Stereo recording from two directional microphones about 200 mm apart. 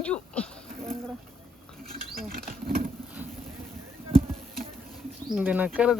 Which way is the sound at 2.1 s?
45° right (ahead or behind).